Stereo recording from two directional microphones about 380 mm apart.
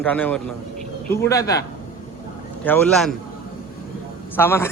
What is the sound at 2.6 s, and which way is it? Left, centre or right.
Speech, centre.